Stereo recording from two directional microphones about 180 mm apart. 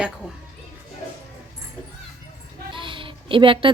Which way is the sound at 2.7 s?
30° right (ahead or behind).